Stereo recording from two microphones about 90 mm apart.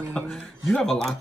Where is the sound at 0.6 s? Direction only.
5° left (ahead or behind).